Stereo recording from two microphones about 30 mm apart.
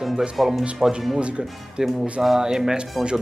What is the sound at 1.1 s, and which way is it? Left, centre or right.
Speech, right.